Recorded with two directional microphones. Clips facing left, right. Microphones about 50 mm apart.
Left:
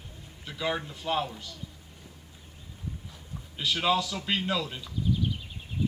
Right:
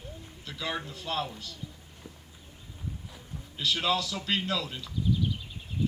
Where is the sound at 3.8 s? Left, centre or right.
Centre.